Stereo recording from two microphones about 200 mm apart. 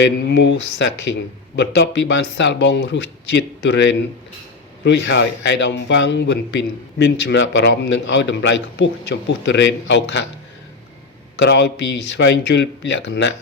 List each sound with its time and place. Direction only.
0.0 s speech: 60° left (ahead or behind)
11.3 s speech: 55° left (ahead or behind)